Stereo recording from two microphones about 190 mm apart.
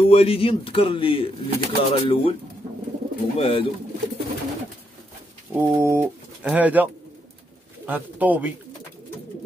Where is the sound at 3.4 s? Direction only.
30° left (ahead or behind).